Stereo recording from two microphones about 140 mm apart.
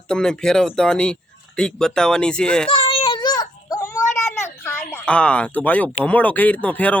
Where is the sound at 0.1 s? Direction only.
5° left (ahead or behind).